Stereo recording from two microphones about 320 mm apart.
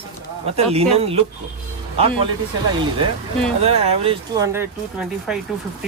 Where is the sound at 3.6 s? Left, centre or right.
Centre.